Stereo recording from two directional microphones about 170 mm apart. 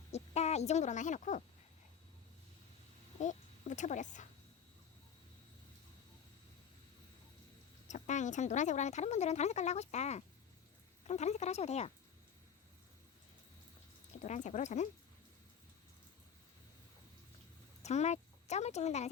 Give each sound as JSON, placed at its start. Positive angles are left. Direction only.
{"t": 0.1, "sound": "speech", "side_deg": 40}
{"t": 3.2, "sound": "speech", "side_deg": 45}
{"t": 7.9, "sound": "speech", "side_deg": 45}
{"t": 14.2, "sound": "speech", "side_deg": 45}
{"t": 17.8, "sound": "speech", "side_deg": 40}